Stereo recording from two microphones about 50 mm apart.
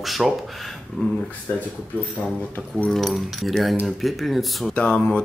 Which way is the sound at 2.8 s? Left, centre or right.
Centre.